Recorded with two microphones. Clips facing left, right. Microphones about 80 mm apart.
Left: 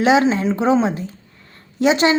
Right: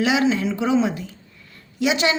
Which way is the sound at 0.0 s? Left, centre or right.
Left.